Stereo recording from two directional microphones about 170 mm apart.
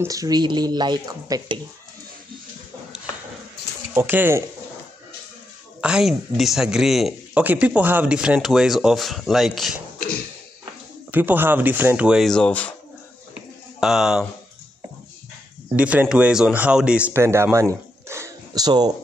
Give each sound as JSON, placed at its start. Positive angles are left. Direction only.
{"t": 0.0, "sound": "speech", "side_deg": -20}
{"t": 3.9, "sound": "speech", "side_deg": -10}
{"t": 5.8, "sound": "speech", "side_deg": -5}
{"t": 9.9, "sound": "a sound", "side_deg": 60}
{"t": 11.1, "sound": "speech", "side_deg": -10}
{"t": 13.7, "sound": "speech", "side_deg": -5}
{"t": 15.7, "sound": "speech", "side_deg": -10}
{"t": 18.0, "sound": "a sound", "side_deg": -15}